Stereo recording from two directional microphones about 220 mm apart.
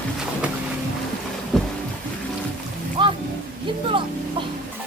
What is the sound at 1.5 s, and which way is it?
Boat, centre (ahead or behind).